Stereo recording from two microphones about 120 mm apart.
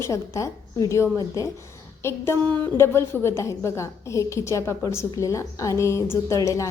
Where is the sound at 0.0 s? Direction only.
25° left (ahead or behind).